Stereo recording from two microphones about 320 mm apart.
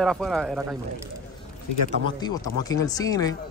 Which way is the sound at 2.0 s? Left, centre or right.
Centre.